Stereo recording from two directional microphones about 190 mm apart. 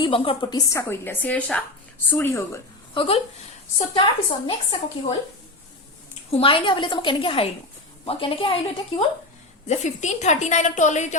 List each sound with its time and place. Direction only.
0.0 s a woman's voice: 25° left (ahead or behind)
2.9 s a woman's voice: 30° left (ahead or behind)
6.4 s a woman's voice: 25° left (ahead or behind)